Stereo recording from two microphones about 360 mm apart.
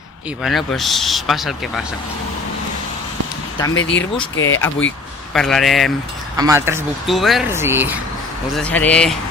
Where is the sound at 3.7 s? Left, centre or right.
Left.